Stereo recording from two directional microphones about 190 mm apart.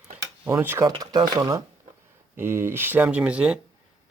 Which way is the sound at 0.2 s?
15° right (ahead or behind).